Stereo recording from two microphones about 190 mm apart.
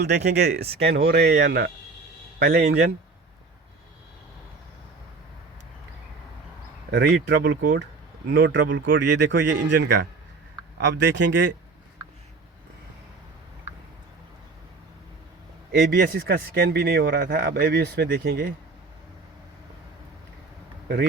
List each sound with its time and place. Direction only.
0.3 s a man's voice: 60° right (ahead or behind)
6.9 s a man's voice: 65° right (ahead or behind)
7.5 s speech: 45° right (ahead or behind)
8.3 s speech: 70° right (ahead or behind)
15.8 s a man's voice: 55° right (ahead or behind)